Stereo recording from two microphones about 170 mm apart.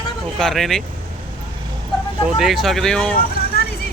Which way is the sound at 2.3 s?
Centre (ahead or behind).